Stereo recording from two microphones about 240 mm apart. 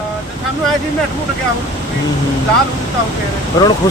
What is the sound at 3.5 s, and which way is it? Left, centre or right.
Speech, centre.